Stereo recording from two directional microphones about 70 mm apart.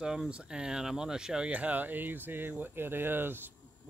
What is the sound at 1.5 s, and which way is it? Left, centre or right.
Speech, right.